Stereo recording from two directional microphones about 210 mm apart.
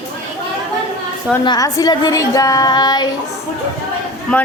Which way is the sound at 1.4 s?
20° left (ahead or behind).